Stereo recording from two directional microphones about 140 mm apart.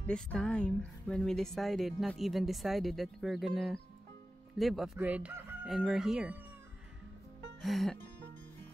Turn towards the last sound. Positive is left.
turn(degrees=0)  # may be behind; listen again after turning